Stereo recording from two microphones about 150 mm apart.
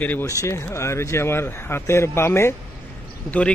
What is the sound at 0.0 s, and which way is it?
Speech, 10° left (ahead or behind).